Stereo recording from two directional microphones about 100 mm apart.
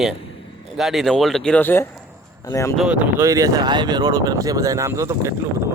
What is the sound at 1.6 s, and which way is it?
Speech, 25° left (ahead or behind).